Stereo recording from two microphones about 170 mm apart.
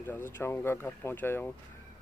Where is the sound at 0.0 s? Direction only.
15° left (ahead or behind).